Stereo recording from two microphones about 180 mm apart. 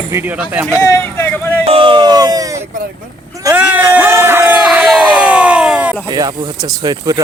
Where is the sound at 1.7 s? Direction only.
30° right (ahead or behind).